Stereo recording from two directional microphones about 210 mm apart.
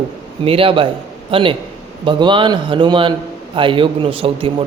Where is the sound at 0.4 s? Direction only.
25° right (ahead or behind).